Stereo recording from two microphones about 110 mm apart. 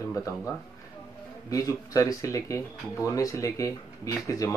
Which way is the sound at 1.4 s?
30° left (ahead or behind).